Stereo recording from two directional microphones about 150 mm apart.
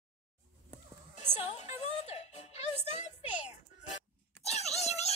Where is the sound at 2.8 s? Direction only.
50° left (ahead or behind).